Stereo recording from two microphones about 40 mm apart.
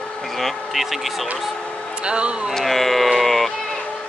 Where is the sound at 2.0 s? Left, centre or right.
Right.